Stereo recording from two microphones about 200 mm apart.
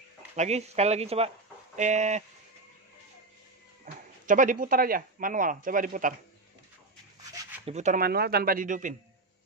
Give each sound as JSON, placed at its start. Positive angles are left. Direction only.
{"t": 0.4, "sound": "speech", "side_deg": -35}
{"t": 3.8, "sound": "speech", "side_deg": -40}
{"t": 7.6, "sound": "speech", "side_deg": -35}